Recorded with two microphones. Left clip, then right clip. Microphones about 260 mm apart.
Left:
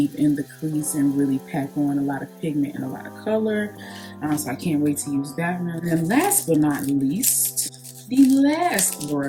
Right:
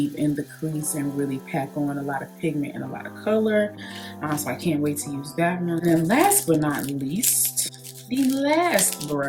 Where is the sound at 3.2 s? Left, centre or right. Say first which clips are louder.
Right 2 dB; centre.